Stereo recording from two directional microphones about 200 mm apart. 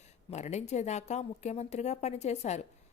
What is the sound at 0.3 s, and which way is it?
A woman's voice, 35° left (ahead or behind).